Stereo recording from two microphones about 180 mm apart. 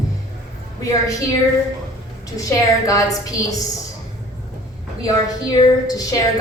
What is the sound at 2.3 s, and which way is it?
A woman's voice, 20° left (ahead or behind).